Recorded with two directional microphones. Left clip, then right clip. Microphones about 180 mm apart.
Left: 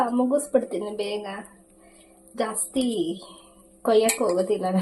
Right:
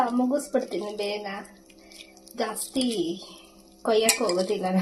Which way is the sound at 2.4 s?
Centre (ahead or behind).